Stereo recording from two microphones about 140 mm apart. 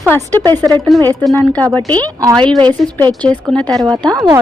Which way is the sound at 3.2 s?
10° left (ahead or behind).